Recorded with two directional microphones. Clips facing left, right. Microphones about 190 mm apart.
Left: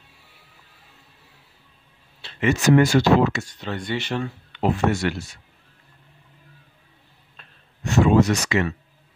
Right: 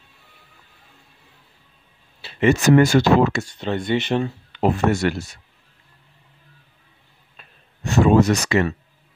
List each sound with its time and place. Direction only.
2.2 s a sound: 5° right (ahead or behind)
2.6 s speech: 50° right (ahead or behind)
3.4 s speech: 25° right (ahead or behind)
4.5 s speech: 45° right (ahead or behind)
7.4 s a sound: 5° right (ahead or behind)
7.8 s speech: 35° right (ahead or behind)